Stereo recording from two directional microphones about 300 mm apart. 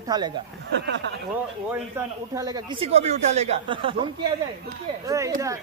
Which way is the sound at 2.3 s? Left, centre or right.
Centre.